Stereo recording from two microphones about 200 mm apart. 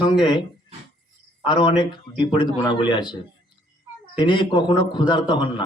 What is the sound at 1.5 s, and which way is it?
A man's voice, 25° left (ahead or behind).